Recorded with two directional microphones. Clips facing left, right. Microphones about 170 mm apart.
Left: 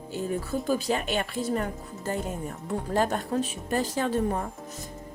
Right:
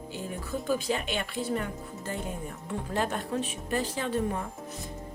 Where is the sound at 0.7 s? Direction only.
40° left (ahead or behind).